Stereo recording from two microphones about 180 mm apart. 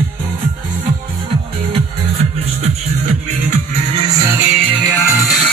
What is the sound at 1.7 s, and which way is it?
Music, 35° right (ahead or behind).